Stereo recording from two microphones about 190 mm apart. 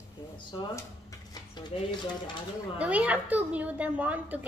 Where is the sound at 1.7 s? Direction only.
30° left (ahead or behind).